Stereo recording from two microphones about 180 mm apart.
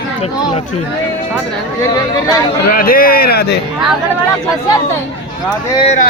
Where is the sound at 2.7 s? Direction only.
55° left (ahead or behind).